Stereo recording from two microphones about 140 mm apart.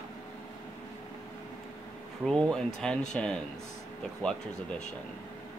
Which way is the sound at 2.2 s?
5° left (ahead or behind).